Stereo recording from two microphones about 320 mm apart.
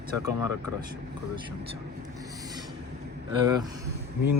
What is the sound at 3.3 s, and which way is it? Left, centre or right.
Speech, centre.